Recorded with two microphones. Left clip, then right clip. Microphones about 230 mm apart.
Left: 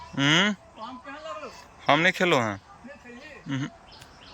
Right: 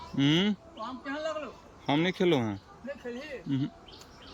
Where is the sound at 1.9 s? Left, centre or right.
Centre.